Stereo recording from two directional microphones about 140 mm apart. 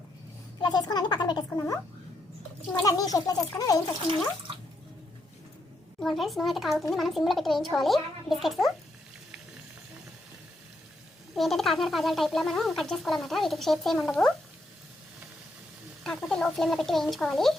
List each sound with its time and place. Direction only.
0.6 s a sound: 30° left (ahead or behind)
1.5 s a child's voice: 20° left (ahead or behind)
6.0 s speech: centre (ahead or behind)
11.3 s speech: centre (ahead or behind)
16.0 s speech: 5° left (ahead or behind)